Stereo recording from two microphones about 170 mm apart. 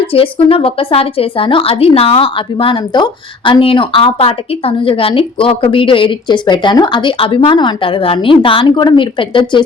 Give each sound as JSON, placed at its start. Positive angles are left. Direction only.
{"t": 0.0, "sound": "a woman's voice", "side_deg": 30}